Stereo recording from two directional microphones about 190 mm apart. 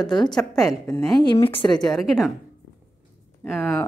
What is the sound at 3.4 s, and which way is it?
Speech, 10° left (ahead or behind).